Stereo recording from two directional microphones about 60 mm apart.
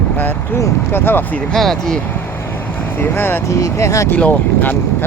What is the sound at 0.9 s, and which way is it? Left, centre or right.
Speech, left.